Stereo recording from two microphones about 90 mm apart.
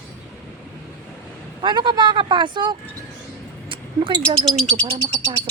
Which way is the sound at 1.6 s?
60° right (ahead or behind).